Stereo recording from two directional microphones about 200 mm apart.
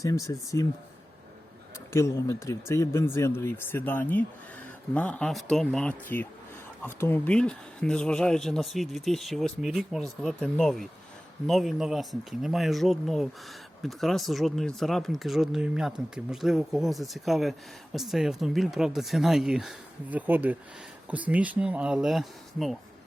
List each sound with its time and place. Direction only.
0.0 s speech: 15° left (ahead or behind)
1.9 s speech: 15° left (ahead or behind)